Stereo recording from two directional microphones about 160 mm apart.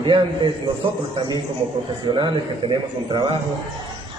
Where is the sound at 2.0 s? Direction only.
30° right (ahead or behind).